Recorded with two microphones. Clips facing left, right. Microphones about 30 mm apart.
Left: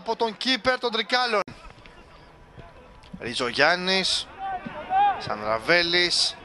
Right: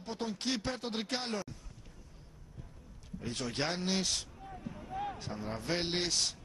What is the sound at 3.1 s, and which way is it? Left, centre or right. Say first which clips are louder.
Speech: left 13 dB; left.